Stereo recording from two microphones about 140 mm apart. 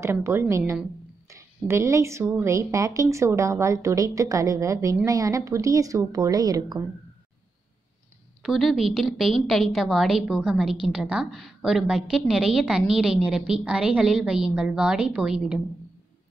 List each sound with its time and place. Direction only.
0.0 s a woman's voice: 20° right (ahead or behind)
8.4 s a woman's voice: centre (ahead or behind)